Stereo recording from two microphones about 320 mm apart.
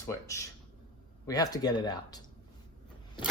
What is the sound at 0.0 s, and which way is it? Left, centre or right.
Speech, centre.